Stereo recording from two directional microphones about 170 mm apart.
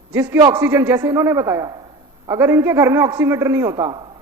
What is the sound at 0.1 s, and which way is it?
A woman's voice, 10° right (ahead or behind).